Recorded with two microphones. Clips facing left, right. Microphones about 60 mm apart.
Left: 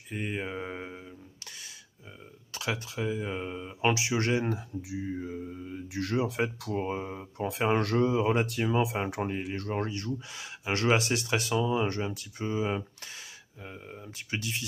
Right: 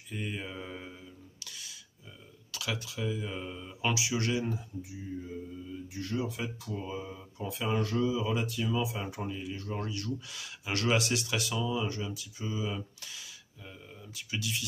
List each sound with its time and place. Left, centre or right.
0.1 s a sound: left
2.5 s speech: left
4.5 s speech: left